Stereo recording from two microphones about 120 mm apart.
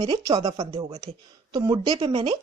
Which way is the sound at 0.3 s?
50° right (ahead or behind).